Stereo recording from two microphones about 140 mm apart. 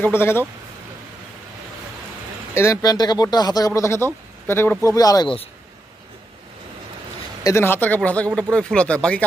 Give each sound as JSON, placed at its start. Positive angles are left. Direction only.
{"t": 0.0, "sound": "speech", "side_deg": 15}
{"t": 2.5, "sound": "speech", "side_deg": 20}
{"t": 4.9, "sound": "speech", "side_deg": 25}
{"t": 7.4, "sound": "speech", "side_deg": 15}